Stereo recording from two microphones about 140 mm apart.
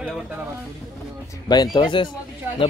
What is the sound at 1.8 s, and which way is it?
Speech, 35° left (ahead or behind).